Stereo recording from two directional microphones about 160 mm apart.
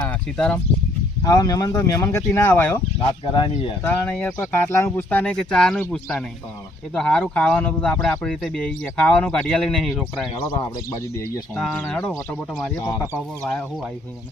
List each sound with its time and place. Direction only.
0.0 s speech: 5° left (ahead or behind)
1.2 s speech: 25° left (ahead or behind)
3.3 s speech: 30° left (ahead or behind)
3.8 s speech: 10° left (ahead or behind)
10.3 s speech: 30° left (ahead or behind)
11.5 s speech: centre (ahead or behind)
12.7 s speech: 20° left (ahead or behind)
13.4 s speech: centre (ahead or behind)